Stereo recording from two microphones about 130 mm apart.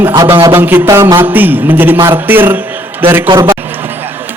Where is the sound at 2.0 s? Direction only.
15° right (ahead or behind).